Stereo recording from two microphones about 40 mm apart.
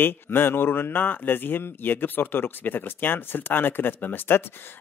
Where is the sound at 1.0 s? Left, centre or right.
Left.